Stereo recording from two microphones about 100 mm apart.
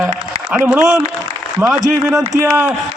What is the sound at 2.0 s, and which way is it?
Speech, 25° right (ahead or behind).